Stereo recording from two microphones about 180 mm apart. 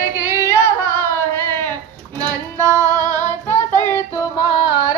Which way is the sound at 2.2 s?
20° right (ahead or behind).